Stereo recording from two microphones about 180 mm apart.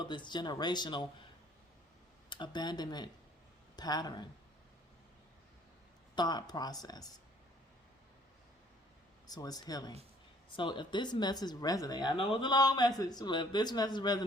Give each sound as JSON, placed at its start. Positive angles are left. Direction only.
{"t": 0.0, "sound": "speech", "side_deg": 25}
{"t": 2.3, "sound": "speech", "side_deg": 25}
{"t": 6.1, "sound": "speech", "side_deg": 25}
{"t": 9.2, "sound": "speech", "side_deg": 20}